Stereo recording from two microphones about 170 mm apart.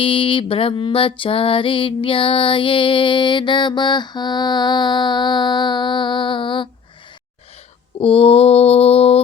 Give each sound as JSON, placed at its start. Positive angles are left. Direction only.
{"t": 0.0, "sound": "music", "side_deg": 30}
{"t": 7.9, "sound": "mantra", "side_deg": 35}